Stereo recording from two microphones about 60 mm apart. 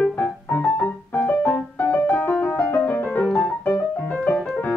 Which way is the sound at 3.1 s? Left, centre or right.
Centre.